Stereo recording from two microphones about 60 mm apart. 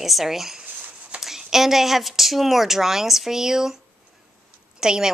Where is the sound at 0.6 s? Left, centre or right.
Right.